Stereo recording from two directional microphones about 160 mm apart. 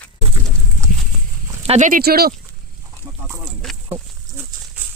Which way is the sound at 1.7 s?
50° right (ahead or behind).